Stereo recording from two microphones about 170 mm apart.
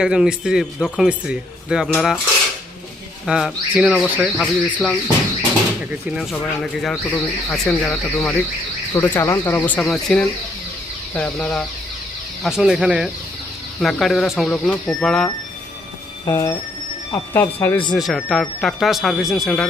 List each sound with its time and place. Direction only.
0.0 s speech: 5° right (ahead or behind)
3.2 s speech: 5° right (ahead or behind)
4.4 s speech: 5° left (ahead or behind)
5.9 s speech: 5° right (ahead or behind)
16.2 s speech: 15° left (ahead or behind)
17.9 s speech: centre (ahead or behind)